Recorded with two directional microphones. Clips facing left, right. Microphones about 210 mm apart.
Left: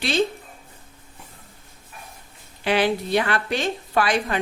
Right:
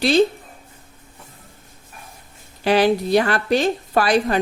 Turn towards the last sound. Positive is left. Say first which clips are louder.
# right 4 dB
turn(degrees=-35)  # may be behind; listen again after turning